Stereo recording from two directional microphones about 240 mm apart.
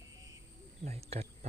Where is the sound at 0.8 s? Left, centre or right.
Right.